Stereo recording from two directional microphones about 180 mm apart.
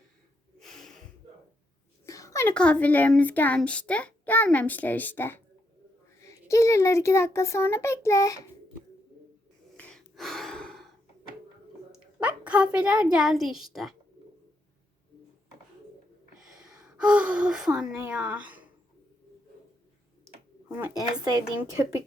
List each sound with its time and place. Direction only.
0.6 s a sound: centre (ahead or behind)
2.0 s a woman's voice: 20° left (ahead or behind)
9.7 s gasp: 5° left (ahead or behind)
11.9 s a child's voice: 5° right (ahead or behind)
16.6 s a woman's voice: 5° right (ahead or behind)
20.7 s speech: 10° right (ahead or behind)